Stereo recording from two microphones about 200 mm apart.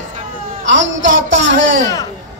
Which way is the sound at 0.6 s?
70° right (ahead or behind).